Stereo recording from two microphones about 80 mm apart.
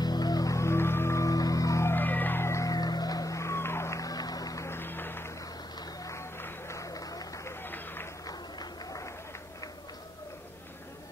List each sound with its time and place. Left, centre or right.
0.0 s music: left
0.6 s music: left
1.9 s music: left
2.7 s music: left
4.6 s music: left
6.8 s a sound: left
7.4 s run: left
8.3 s a sound: left